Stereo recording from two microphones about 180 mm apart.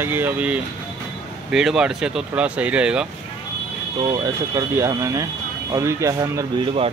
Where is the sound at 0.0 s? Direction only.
10° right (ahead or behind).